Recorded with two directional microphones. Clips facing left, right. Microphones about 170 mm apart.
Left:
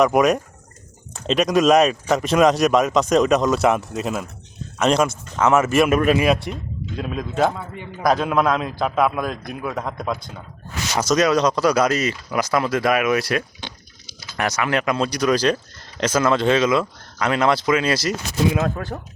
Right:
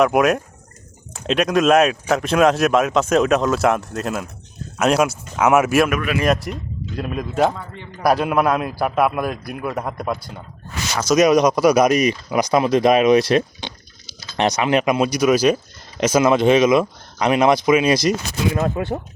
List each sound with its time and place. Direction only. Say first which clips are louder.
0.0 s speech: even; 5° right (ahead or behind)
6.1 s speech: even; centre (ahead or behind)
7.6 s speech: left 2 dB; 10° left (ahead or behind)
8.0 s speech: right 1 dB; 5° right (ahead or behind)
11.1 s speech: right 4 dB; 15° right (ahead or behind)